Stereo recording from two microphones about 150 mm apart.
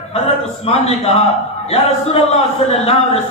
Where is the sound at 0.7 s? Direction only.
45° left (ahead or behind).